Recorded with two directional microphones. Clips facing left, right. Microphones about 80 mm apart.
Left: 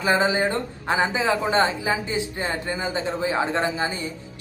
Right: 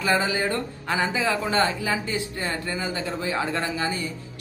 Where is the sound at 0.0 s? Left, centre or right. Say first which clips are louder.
Left 3 dB; left.